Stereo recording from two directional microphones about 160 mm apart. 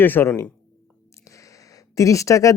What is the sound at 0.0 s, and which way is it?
Speech, 15° left (ahead or behind).